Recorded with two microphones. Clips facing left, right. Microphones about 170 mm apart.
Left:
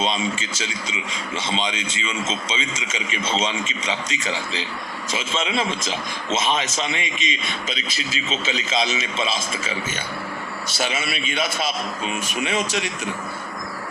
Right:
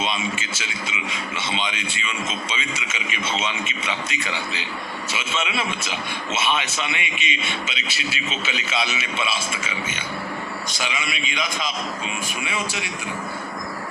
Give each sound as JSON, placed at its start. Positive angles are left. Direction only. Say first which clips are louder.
{"t": 0.0, "sound": "a man's voice", "louder": "left 3 dB", "side_deg": 30}
{"t": 3.1, "sound": "a man's voice", "louder": "left 3 dB", "side_deg": 35}
{"t": 5.1, "sound": "a man's voice", "louder": "left 3 dB", "side_deg": 30}